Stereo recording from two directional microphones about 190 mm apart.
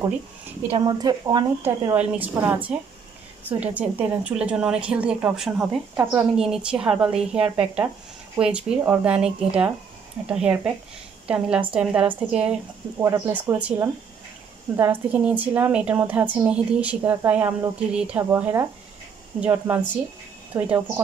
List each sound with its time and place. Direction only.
0.7 s a woman's voice: 25° right (ahead or behind)
2.0 s a woman's voice: 10° right (ahead or behind)